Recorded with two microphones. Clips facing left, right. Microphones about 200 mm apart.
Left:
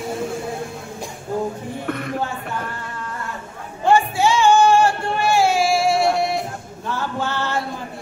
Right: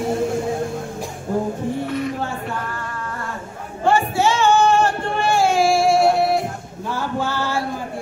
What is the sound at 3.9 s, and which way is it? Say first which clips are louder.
Music: left 1 dB; 15° left (ahead or behind).